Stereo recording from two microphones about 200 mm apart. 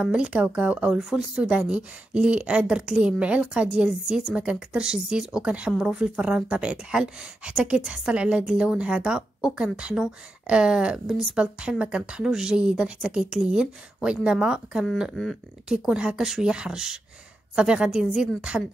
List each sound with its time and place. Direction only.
0.0 s speech: 5° right (ahead or behind)